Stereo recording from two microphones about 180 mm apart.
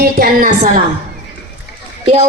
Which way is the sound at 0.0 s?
55° right (ahead or behind).